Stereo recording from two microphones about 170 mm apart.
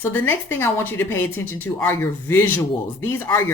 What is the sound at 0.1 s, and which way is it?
Speech, 15° left (ahead or behind).